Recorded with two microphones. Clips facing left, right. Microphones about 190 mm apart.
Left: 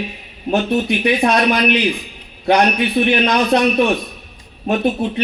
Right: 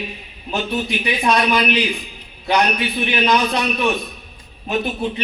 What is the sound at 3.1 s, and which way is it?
Speech, 60° left (ahead or behind).